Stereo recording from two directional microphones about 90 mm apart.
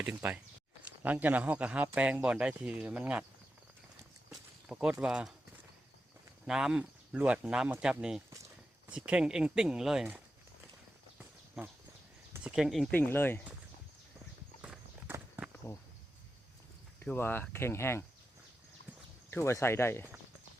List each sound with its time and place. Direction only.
0.0 s speech: 20° right (ahead or behind)
4.3 s speech: 5° right (ahead or behind)
6.5 s speech: 5° right (ahead or behind)
11.6 s speech: 5° right (ahead or behind)
12.9 s speech: 25° left (ahead or behind)
15.6 s speech: 35° left (ahead or behind)
17.2 s speech: 25° left (ahead or behind)
19.3 s speech: 30° left (ahead or behind)